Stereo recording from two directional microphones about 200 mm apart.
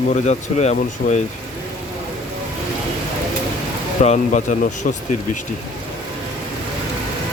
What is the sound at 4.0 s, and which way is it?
Speech, 35° left (ahead or behind).